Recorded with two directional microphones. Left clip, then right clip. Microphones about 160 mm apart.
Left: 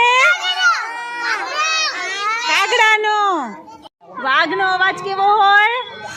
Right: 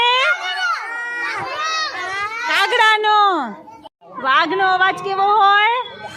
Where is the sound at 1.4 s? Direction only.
25° left (ahead or behind).